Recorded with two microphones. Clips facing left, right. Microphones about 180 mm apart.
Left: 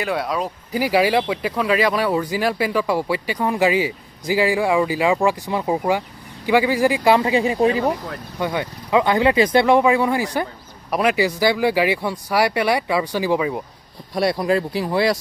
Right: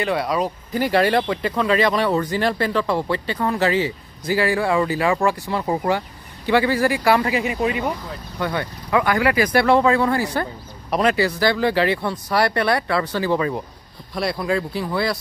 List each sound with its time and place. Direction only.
0.0 s speech: centre (ahead or behind); by 7.9 s 30° left (ahead or behind)
8.4 s speech: 15° left (ahead or behind)
14.3 s speech: 35° left (ahead or behind)